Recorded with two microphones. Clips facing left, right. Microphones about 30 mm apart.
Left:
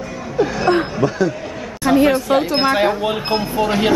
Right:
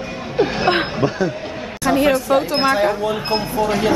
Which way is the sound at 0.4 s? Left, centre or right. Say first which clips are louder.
Left 1 dB; right.